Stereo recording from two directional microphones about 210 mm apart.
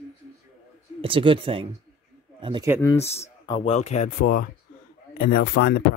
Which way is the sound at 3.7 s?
30° left (ahead or behind).